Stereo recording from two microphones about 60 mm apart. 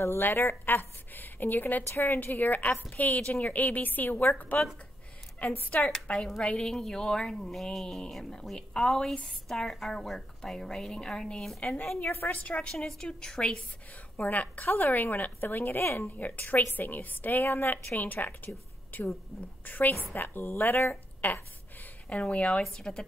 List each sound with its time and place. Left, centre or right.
0.0 s a woman's voice: left
1.9 s a woman's voice: left
2.3 s a woman's voice: left
3.2 s speech: centre
3.4 s a woman's voice: left
5.9 s speech: centre
12.0 s a woman's voice: left
12.4 s a woman's voice: left
12.7 s speech: centre
14.1 s a woman's voice: left
16.2 s a woman's voice: left
22.1 s a woman's voice: left